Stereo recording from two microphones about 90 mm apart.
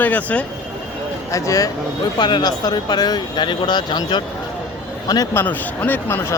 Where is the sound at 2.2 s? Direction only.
55° left (ahead or behind).